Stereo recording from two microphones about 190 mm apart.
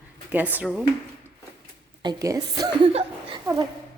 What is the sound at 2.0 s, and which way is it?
A woman's voice, 20° right (ahead or behind).